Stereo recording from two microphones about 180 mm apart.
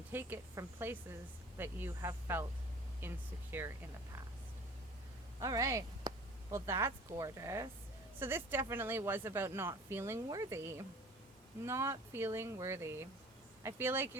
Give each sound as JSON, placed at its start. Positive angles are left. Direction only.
{"t": 0.1, "sound": "speech", "side_deg": -10}
{"t": 5.4, "sound": "speech", "side_deg": -20}